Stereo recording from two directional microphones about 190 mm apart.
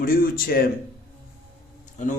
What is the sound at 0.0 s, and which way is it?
Speech, 50° left (ahead or behind).